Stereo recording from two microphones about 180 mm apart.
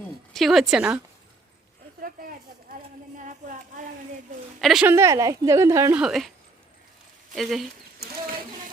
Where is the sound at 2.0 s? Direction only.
50° right (ahead or behind).